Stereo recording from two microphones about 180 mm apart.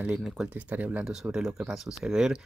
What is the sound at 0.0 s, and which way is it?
Speech, 5° right (ahead or behind).